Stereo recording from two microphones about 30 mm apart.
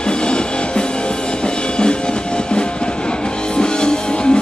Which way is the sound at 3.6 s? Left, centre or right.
Left.